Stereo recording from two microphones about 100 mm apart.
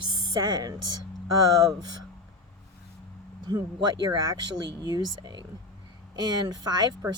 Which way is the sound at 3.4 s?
45° right (ahead or behind).